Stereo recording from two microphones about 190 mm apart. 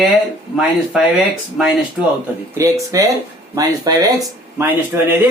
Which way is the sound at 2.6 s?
15° right (ahead or behind).